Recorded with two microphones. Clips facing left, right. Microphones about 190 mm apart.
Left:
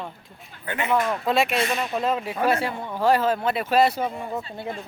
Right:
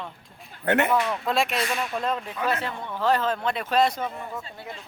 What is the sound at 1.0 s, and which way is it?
Speech, 45° left (ahead or behind).